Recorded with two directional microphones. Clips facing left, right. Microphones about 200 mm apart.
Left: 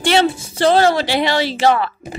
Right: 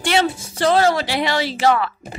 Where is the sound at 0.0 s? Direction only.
30° left (ahead or behind).